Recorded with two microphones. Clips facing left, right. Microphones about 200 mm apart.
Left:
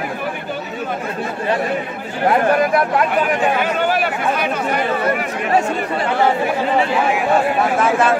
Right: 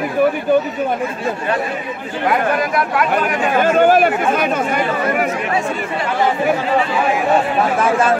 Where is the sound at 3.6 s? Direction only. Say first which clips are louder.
Right 7 dB; 45° right (ahead or behind).